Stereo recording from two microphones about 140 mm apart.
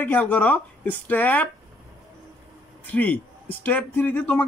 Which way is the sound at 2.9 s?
10° left (ahead or behind).